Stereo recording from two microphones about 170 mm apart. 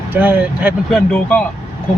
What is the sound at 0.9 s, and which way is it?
Speech, 10° left (ahead or behind).